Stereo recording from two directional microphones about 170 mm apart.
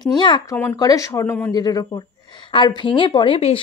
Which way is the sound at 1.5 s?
25° left (ahead or behind).